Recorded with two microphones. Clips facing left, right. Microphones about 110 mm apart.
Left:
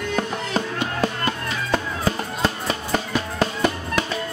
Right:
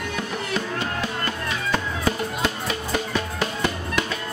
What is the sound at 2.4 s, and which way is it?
Music, 40° left (ahead or behind).